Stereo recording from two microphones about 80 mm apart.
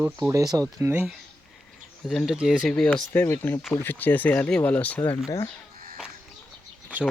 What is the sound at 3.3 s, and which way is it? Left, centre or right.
Speech, left.